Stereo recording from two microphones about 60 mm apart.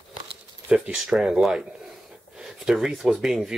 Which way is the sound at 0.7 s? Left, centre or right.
Centre.